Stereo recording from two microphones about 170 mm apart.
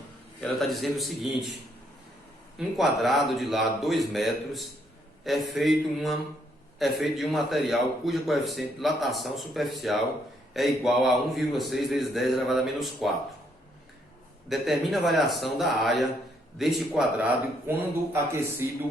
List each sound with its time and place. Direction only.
0.6 s a man's voice: centre (ahead or behind)
2.6 s a man's voice: centre (ahead or behind)
14.5 s a man's voice: centre (ahead or behind)
17.7 s speech: 15° right (ahead or behind)